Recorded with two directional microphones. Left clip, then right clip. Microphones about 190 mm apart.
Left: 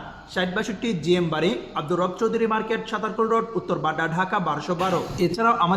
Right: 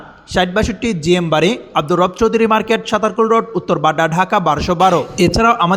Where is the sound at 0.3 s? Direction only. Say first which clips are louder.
Right 10 dB; 35° right (ahead or behind).